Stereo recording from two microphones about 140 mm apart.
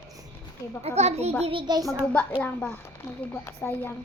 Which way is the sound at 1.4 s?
40° right (ahead or behind).